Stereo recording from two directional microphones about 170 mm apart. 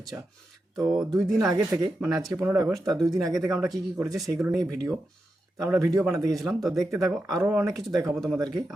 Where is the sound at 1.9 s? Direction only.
5° right (ahead or behind).